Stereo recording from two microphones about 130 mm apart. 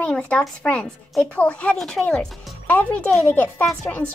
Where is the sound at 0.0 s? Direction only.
10° left (ahead or behind).